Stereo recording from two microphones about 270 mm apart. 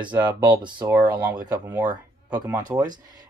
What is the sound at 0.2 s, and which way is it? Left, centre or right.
Speech, centre.